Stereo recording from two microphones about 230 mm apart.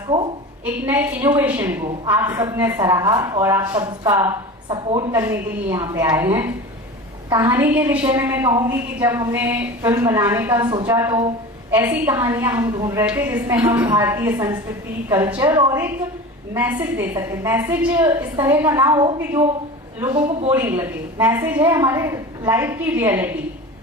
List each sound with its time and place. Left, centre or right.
0.6 s a woman's voice: centre